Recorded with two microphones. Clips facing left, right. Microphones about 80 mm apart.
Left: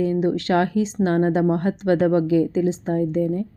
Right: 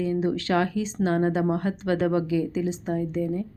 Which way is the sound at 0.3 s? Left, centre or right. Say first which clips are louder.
Left 4 dB; left.